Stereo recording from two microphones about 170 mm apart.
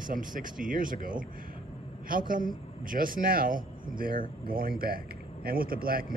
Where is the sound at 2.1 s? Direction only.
55° right (ahead or behind).